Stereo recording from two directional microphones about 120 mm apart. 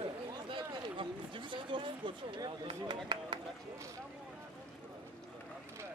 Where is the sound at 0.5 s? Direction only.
45° right (ahead or behind).